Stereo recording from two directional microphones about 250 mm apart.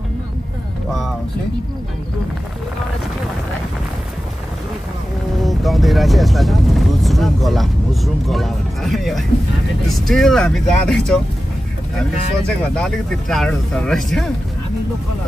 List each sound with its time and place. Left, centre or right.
5.4 s speech: centre
12.7 s speech: centre